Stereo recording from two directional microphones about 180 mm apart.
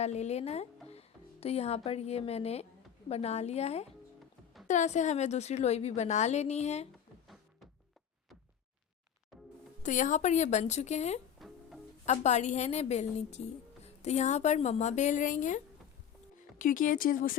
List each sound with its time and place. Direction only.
0.0 s a woman's voice: 35° left (ahead or behind)
9.8 s a woman's voice: 45° left (ahead or behind)
11.3 s music: centre (ahead or behind)
12.0 s a woman's voice: 40° left (ahead or behind)